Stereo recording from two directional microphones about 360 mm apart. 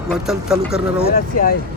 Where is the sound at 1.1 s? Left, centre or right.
Left.